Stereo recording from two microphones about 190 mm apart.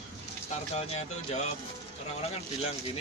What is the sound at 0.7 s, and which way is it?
Speech, 35° left (ahead or behind).